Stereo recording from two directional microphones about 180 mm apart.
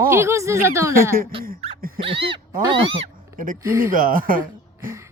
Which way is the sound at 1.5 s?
35° right (ahead or behind).